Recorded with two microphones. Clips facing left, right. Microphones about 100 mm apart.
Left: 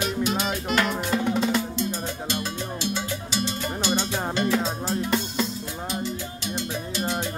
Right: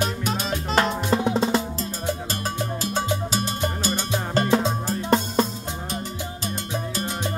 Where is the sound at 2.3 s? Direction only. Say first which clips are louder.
Right 2 dB; 40° right (ahead or behind).